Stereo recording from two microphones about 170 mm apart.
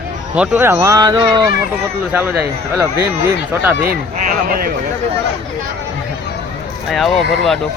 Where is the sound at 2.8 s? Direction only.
15° right (ahead or behind).